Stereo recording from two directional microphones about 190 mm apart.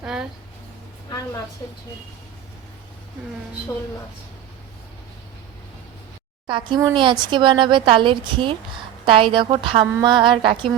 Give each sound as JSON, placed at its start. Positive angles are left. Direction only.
{"t": 0.0, "sound": "speech", "side_deg": -5}
{"t": 6.5, "sound": "a woman's voice", "side_deg": -20}